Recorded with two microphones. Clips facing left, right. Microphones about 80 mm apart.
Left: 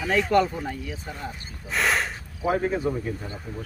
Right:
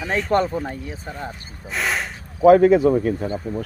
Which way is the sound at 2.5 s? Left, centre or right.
Right.